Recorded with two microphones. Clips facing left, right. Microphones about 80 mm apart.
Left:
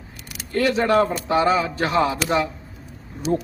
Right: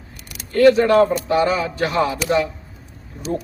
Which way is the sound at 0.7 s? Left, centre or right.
Left.